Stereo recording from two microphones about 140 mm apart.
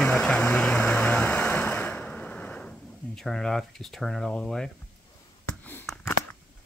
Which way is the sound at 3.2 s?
5° left (ahead or behind).